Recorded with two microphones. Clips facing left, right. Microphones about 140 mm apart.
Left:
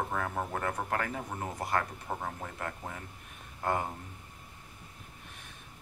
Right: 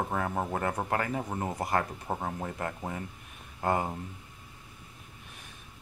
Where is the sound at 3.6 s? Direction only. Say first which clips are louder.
Right 3 dB; 10° right (ahead or behind).